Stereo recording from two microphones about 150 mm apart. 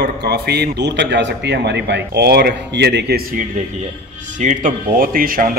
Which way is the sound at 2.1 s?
90° right.